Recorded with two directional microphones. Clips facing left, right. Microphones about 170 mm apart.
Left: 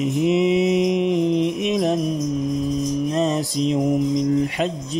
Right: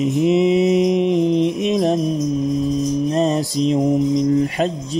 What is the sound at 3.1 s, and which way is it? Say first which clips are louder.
Mantra: right 3 dB; 35° right (ahead or behind).